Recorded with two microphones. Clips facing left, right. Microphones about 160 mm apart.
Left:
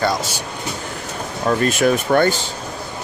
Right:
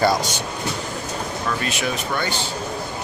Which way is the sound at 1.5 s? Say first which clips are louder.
Left 11 dB; 45° left (ahead or behind).